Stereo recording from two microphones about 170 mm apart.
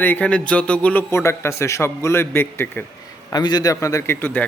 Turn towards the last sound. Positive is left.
turn(degrees=10)  # may be behind; listen again after turning